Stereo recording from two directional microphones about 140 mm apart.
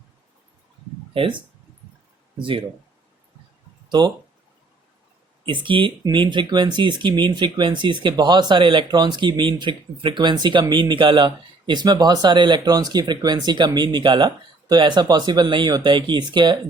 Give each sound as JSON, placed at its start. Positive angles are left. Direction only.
{"t": 1.1, "sound": "speech", "side_deg": -40}
{"t": 3.8, "sound": "speech", "side_deg": -30}
{"t": 5.5, "sound": "speech", "side_deg": -35}